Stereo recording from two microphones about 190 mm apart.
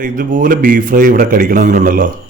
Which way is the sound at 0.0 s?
45° right (ahead or behind).